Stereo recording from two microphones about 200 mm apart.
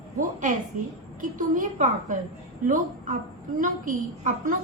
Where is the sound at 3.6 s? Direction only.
40° right (ahead or behind).